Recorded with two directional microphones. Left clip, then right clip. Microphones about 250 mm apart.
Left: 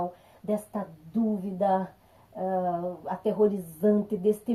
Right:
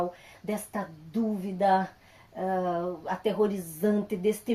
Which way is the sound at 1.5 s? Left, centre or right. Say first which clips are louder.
Right 2 dB; right.